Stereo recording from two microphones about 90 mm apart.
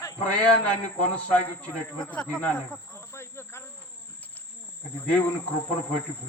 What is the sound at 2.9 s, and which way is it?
Cricket, 30° left (ahead or behind).